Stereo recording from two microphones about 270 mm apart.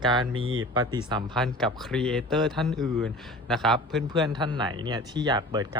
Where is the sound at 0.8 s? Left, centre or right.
Centre.